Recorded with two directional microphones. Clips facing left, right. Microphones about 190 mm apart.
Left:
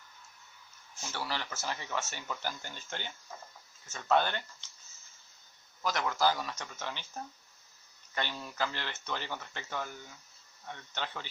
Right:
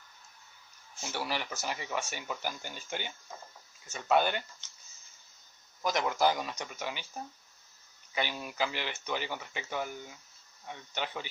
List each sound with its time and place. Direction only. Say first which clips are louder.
1.0 s speech: right 2 dB; 15° right (ahead or behind)
5.8 s speech: right 2 dB; 20° right (ahead or behind)